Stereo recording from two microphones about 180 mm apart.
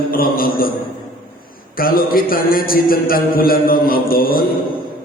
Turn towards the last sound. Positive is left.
turn(degrees=55)  # may be behind; listen again after turning